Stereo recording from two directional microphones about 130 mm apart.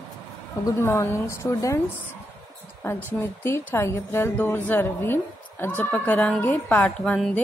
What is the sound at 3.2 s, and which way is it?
A woman's voice, 20° left (ahead or behind).